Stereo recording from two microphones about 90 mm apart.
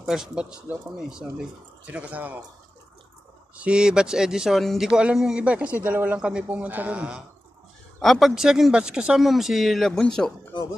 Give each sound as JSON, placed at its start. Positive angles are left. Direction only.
{"t": 0.0, "sound": "speech", "side_deg": -5}
{"t": 3.5, "sound": "speech", "side_deg": -10}
{"t": 8.0, "sound": "speech", "side_deg": 0}